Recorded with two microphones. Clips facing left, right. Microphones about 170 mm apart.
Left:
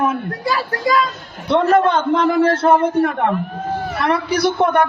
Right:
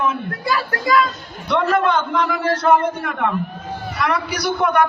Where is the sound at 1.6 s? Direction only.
45° left (ahead or behind).